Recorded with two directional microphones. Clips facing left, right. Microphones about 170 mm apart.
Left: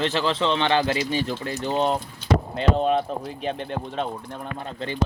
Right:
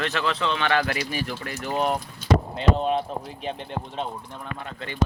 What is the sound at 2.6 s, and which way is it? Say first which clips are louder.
Speech: left 2 dB; 50° left (ahead or behind).